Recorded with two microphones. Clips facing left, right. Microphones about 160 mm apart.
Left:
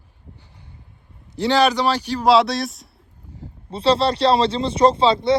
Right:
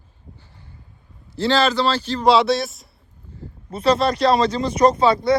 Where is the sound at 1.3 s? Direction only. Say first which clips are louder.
Left 1 dB; 15° left (ahead or behind).